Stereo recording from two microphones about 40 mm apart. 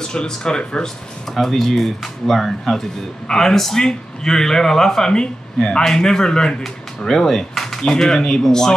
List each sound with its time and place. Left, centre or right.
0.0 s speech: centre
1.3 s speech: centre